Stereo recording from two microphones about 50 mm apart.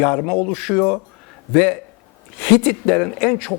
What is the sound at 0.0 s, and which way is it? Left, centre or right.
A man's voice, centre.